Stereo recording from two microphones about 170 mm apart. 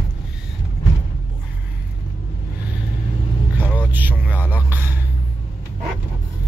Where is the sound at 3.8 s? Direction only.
10° right (ahead or behind).